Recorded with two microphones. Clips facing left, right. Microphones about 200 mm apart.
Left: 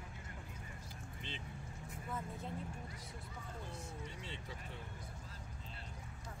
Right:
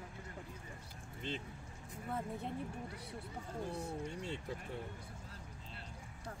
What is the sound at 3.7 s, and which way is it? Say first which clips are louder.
Speech: right 7 dB; 60° right (ahead or behind).